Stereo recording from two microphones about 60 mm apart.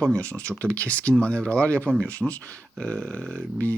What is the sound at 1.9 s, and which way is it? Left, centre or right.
Speech, right.